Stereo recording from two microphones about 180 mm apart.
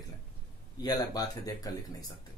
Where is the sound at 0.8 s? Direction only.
20° left (ahead or behind).